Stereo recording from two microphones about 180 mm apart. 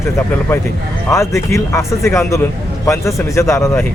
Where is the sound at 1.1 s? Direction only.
15° left (ahead or behind).